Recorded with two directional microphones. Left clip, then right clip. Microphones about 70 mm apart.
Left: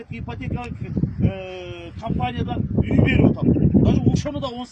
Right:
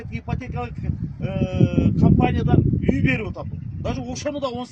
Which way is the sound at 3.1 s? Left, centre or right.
Centre.